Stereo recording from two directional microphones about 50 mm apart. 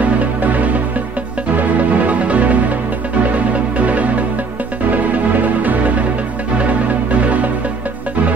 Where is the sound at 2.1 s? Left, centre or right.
Right.